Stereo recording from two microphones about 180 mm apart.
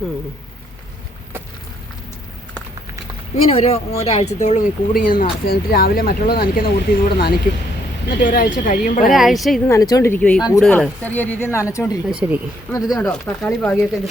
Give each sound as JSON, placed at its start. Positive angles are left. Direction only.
{"t": 3.5, "sound": "speech", "side_deg": 35}
{"t": 9.1, "sound": "speech", "side_deg": 0}
{"t": 9.6, "sound": "speech", "side_deg": 20}
{"t": 12.2, "sound": "speech", "side_deg": -10}
{"t": 12.7, "sound": "speech", "side_deg": 15}
{"t": 13.1, "sound": "speech", "side_deg": 5}